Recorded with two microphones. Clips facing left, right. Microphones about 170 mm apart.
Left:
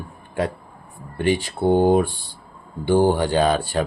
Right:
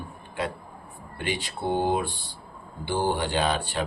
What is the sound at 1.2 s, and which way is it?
Speech, 50° left (ahead or behind).